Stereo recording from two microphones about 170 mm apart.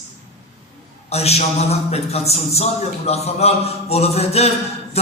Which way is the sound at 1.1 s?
40° left (ahead or behind).